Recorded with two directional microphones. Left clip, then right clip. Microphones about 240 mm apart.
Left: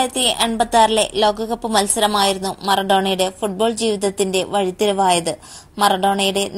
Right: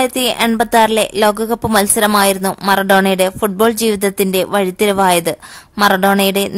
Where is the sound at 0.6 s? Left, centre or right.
Right.